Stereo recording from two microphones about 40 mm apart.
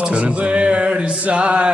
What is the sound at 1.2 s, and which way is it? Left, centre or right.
Speech, right.